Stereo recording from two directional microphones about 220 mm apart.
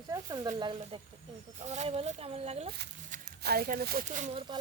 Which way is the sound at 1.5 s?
30° right (ahead or behind).